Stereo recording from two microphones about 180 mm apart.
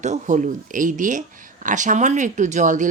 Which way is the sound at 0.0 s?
40° right (ahead or behind).